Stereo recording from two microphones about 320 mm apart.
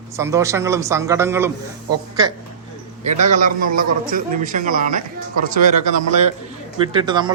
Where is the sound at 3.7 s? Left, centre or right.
Right.